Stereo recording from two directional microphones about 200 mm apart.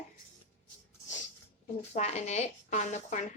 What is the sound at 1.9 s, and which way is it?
Speech, 35° left (ahead or behind).